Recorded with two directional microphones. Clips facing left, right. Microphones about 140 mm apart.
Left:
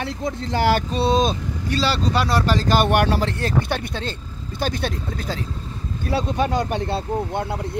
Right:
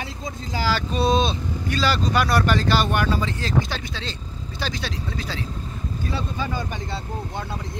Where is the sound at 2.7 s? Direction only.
65° left (ahead or behind); by 5.4 s 50° left (ahead or behind).